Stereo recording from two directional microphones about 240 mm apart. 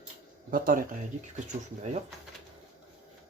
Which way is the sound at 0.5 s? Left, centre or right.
Right.